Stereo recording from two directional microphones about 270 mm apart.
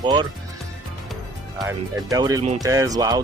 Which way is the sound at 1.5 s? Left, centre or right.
Centre.